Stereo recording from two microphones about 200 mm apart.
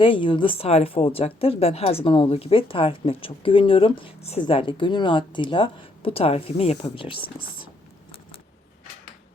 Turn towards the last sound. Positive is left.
turn(degrees=25)  # may be behind; listen again after turning